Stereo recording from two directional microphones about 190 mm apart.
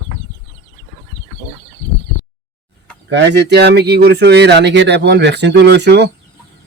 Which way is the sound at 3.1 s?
65° right (ahead or behind).